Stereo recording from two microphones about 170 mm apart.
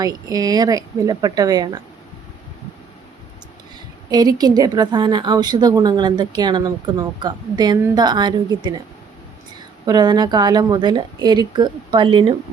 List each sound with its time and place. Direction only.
0.0 s a woman's voice: 20° right (ahead or behind)
4.1 s a woman's voice: 25° right (ahead or behind)
9.8 s a woman's voice: 25° right (ahead or behind)